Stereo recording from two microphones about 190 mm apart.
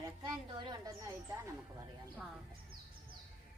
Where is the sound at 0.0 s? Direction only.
20° right (ahead or behind).